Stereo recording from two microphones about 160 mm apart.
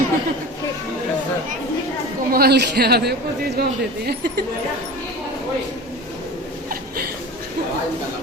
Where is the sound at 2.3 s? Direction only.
75° right (ahead or behind).